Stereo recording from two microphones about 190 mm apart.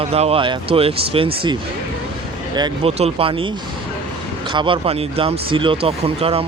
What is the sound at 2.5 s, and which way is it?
Speech, 25° right (ahead or behind).